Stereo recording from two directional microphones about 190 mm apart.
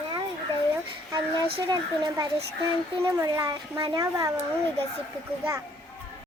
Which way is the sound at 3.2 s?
20° right (ahead or behind).